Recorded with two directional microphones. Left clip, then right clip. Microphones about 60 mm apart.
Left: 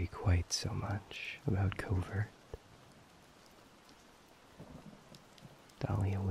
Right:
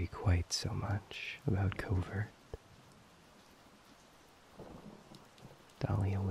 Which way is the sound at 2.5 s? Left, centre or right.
Right.